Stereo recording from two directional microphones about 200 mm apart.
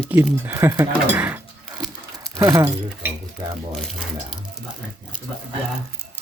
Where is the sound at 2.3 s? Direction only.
20° right (ahead or behind).